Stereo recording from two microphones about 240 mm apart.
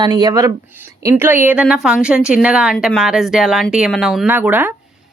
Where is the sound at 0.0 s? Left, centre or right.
Centre.